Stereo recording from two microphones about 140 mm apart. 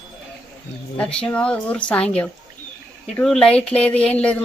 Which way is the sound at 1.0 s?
5° left (ahead or behind).